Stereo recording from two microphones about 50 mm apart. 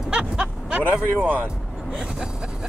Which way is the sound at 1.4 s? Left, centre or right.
Centre.